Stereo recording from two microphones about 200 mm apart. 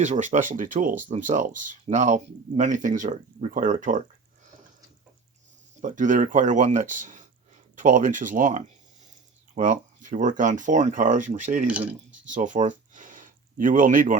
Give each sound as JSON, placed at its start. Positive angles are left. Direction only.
{"t": 0.0, "sound": "speech", "side_deg": -35}
{"t": 5.8, "sound": "speech", "side_deg": -40}
{"t": 11.7, "sound": "speech", "side_deg": -5}
{"t": 12.2, "sound": "speech", "side_deg": -40}